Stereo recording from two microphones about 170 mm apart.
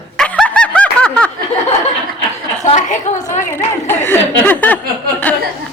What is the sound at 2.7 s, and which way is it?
Speech, 50° left (ahead or behind).